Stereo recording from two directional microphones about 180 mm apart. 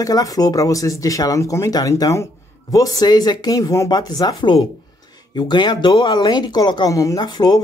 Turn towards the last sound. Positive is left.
turn(degrees=20)  # may be behind; listen again after turning